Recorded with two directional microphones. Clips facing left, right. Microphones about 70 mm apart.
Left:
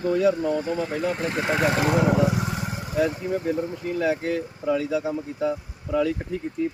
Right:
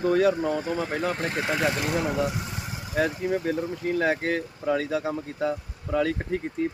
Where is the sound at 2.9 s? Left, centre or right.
Right.